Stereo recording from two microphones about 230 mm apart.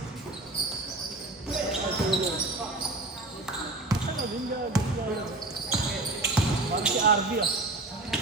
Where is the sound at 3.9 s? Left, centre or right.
Centre.